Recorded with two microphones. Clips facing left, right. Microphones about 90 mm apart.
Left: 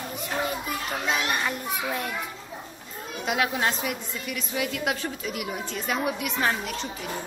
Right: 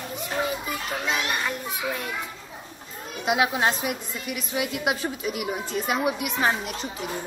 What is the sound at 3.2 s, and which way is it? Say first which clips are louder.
A woman's voice: right 3 dB; 20° right (ahead or behind).